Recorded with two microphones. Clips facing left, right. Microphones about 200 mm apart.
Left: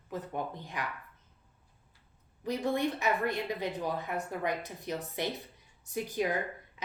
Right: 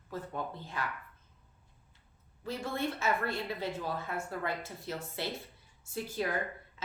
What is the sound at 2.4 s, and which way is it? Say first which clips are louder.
Speech: left 5 dB; 15° left (ahead or behind).